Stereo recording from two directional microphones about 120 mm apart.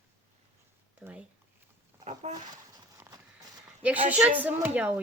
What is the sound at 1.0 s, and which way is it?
Speech, 15° right (ahead or behind).